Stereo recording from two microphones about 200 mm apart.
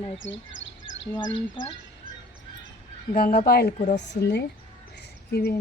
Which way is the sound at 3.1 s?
45° left (ahead or behind).